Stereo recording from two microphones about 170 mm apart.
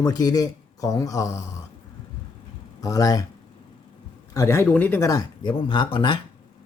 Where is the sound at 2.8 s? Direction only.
20° left (ahead or behind).